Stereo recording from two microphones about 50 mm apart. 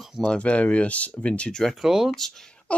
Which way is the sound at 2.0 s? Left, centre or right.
Centre.